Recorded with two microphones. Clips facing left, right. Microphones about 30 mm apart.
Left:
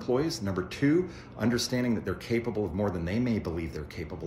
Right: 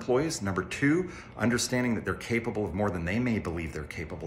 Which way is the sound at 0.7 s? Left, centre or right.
Right.